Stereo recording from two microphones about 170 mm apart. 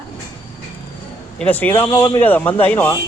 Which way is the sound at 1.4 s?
10° left (ahead or behind).